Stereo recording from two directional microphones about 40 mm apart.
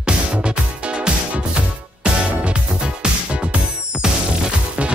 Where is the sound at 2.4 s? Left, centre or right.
Right.